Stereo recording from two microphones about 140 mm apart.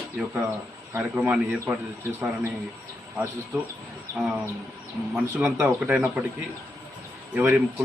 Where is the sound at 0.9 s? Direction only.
10° right (ahead or behind).